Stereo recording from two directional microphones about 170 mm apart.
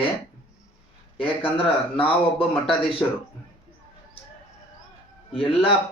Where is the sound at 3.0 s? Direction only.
10° left (ahead or behind).